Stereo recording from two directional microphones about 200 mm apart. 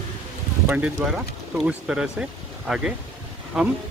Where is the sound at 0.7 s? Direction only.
5° right (ahead or behind).